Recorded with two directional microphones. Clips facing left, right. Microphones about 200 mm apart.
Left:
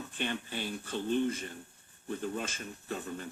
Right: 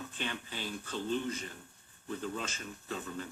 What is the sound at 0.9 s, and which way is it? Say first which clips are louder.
Speech: left 4 dB; 55° left (ahead or behind).